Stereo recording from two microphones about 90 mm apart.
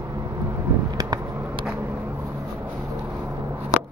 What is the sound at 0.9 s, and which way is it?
Vehicle, 45° right (ahead or behind).